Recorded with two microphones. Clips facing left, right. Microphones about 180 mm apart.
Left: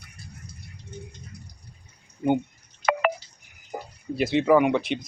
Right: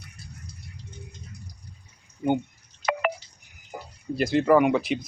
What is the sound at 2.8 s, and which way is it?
Telephone dialing, 50° left (ahead or behind).